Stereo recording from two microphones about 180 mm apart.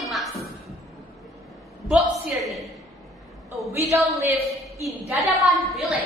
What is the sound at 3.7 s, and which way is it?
Speech, 15° right (ahead or behind).